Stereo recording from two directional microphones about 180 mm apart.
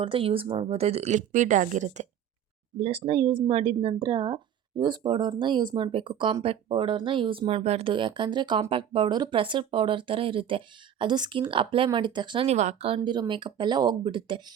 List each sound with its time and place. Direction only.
0.0 s speech: 30° right (ahead or behind)
13.0 s speech: 25° right (ahead or behind)